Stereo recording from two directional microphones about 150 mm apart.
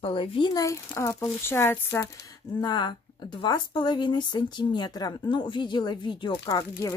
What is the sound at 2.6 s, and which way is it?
A woman's voice, 30° left (ahead or behind).